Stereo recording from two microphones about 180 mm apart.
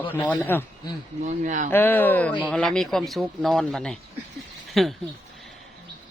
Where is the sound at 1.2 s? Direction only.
45° right (ahead or behind).